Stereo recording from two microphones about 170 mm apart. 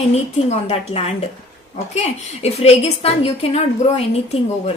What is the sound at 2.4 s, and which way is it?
A woman's voice, 40° left (ahead or behind).